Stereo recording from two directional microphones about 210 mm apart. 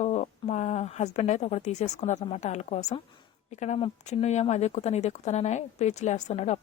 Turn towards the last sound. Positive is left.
turn(degrees=35)  # may be behind; listen again after turning